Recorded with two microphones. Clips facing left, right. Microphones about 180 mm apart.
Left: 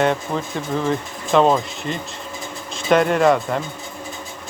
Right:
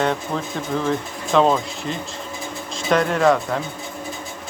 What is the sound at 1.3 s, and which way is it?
Speech, centre (ahead or behind).